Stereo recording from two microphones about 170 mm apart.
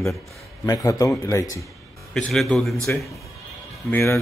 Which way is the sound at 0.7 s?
20° left (ahead or behind).